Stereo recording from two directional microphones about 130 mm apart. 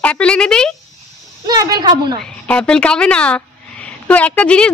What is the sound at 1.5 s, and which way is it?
Speech, 30° right (ahead or behind).